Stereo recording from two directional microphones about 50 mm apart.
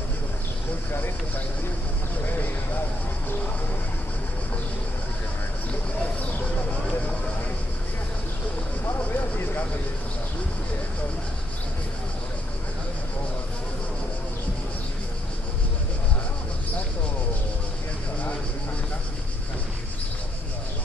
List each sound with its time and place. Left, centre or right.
9.1 s vehicle: left